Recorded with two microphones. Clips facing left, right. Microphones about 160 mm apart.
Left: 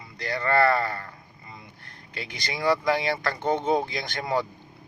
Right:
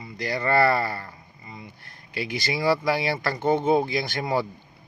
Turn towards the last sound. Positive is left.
turn(degrees=-5)  # may be behind; listen again after turning